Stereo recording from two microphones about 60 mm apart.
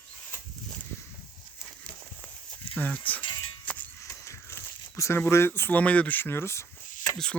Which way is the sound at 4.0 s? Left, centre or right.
Left.